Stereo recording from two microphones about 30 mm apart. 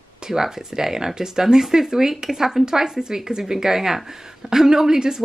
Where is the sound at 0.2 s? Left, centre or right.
Centre.